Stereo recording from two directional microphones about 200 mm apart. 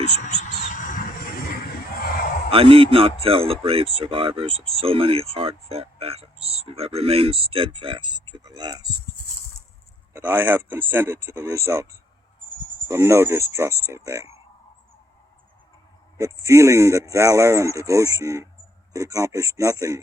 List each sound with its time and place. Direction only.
0.3 s a sound: 40° left (ahead or behind)
2.5 s speech: 25° right (ahead or behind)
10.1 s speech: 10° right (ahead or behind)
16.1 s speech: 15° right (ahead or behind)